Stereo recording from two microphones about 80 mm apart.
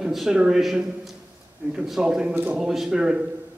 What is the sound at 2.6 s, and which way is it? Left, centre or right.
Speech, centre.